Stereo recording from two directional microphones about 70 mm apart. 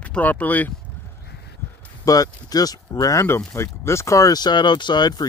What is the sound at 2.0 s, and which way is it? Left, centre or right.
Speech, left.